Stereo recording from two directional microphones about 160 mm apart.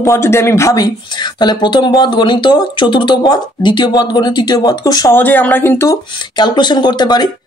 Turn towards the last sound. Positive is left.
turn(degrees=25)  # may be behind; listen again after turning